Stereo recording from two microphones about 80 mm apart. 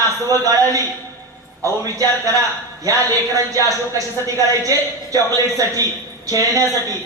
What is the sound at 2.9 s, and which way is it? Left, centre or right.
Speech, right.